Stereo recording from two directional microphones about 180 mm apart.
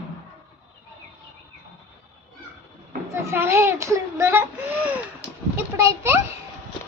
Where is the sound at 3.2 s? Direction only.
15° right (ahead or behind).